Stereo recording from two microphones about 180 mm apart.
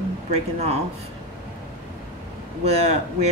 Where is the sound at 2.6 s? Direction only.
35° right (ahead or behind).